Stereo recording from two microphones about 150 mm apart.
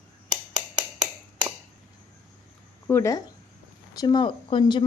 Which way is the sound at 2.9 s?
20° left (ahead or behind).